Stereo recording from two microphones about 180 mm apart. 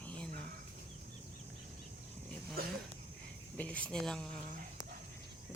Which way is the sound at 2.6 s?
55° right (ahead or behind).